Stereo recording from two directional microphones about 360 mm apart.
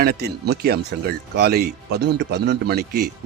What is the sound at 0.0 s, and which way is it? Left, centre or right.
Speech, right.